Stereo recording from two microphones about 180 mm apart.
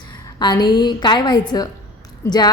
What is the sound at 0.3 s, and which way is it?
A woman's voice, 25° left (ahead or behind).